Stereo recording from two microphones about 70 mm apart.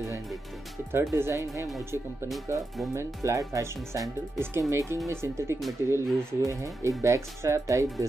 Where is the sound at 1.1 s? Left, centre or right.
Right.